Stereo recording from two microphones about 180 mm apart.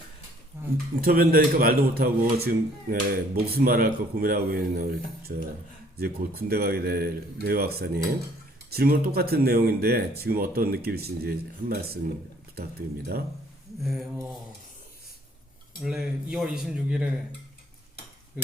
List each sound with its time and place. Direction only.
1.0 s speech: 55° right (ahead or behind)
15.8 s speech: 5° right (ahead or behind)